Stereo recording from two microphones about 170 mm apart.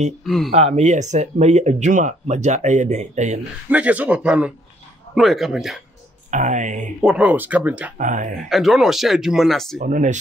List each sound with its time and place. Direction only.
0.2 s speech: centre (ahead or behind)
0.5 s speech: 40° right (ahead or behind)
3.7 s speech: 10° right (ahead or behind)
6.3 s speech: 45° right (ahead or behind)
7.0 s speech: 5° right (ahead or behind)
8.0 s speech: 50° right (ahead or behind)
8.5 s speech: centre (ahead or behind)
9.8 s speech: 45° right (ahead or behind)